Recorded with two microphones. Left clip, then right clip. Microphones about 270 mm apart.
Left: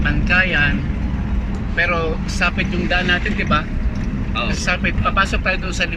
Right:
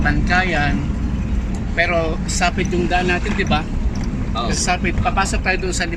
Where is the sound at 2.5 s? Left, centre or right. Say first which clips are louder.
Right 1 dB; centre.